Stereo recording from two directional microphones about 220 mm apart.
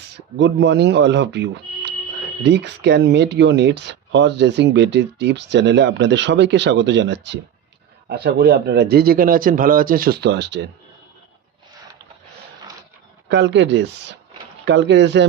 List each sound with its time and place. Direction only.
0.3 s speech: 55° right (ahead or behind)
13.2 s speech: 55° right (ahead or behind)